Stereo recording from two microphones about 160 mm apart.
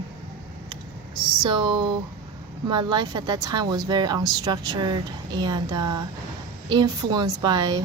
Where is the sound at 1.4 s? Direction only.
30° right (ahead or behind).